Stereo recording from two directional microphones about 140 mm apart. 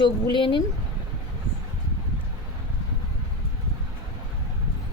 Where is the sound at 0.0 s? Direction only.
35° left (ahead or behind).